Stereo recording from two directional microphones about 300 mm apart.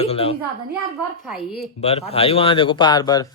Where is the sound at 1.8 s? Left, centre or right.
Left.